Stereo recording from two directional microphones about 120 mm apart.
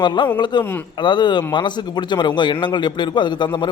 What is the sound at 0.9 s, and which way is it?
A man's voice, 40° left (ahead or behind).